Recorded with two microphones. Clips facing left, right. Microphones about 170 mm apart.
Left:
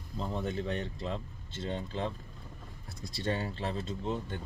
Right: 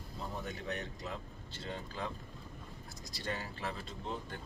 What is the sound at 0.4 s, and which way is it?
Speech, 30° left (ahead or behind).